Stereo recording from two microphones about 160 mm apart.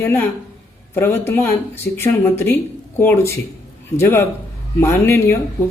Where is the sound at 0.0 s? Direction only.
15° left (ahead or behind).